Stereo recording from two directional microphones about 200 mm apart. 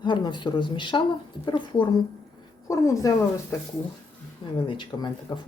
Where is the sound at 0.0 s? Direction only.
25° left (ahead or behind).